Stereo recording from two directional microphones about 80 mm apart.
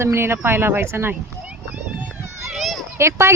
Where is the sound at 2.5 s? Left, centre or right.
Centre.